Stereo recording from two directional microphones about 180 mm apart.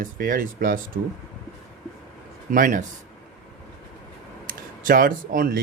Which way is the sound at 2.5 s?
50° right (ahead or behind).